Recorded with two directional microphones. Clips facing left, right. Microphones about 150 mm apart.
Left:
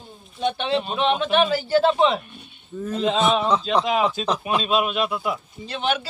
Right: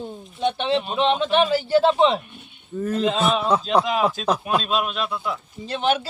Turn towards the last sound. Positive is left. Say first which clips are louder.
# right 3 dB
turn(degrees=-35)  # may be behind; listen again after turning